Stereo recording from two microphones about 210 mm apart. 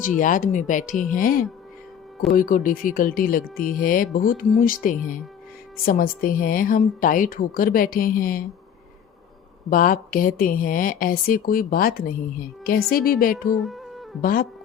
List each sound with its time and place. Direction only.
0.2 s speech: 40° left (ahead or behind)
9.6 s speech: 40° left (ahead or behind)
13.5 s music: centre (ahead or behind)
14.2 s speech: 45° left (ahead or behind)